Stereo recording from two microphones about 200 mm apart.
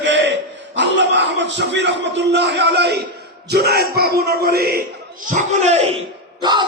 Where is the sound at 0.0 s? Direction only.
65° right (ahead or behind).